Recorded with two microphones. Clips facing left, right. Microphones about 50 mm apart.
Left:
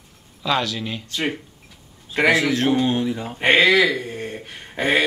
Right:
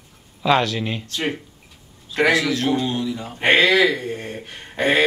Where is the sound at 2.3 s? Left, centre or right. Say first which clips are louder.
Left 3 dB; left.